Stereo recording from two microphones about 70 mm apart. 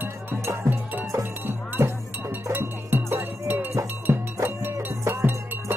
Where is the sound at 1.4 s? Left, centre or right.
Right.